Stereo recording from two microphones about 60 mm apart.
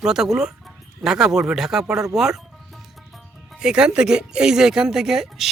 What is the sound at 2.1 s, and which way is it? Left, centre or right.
Music, centre.